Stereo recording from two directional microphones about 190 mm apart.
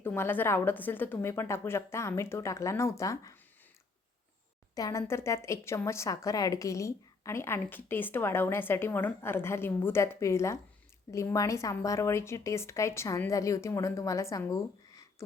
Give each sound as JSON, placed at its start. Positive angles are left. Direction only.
{"t": 0.0, "sound": "speech", "side_deg": 10}
{"t": 4.7, "sound": "speech", "side_deg": 15}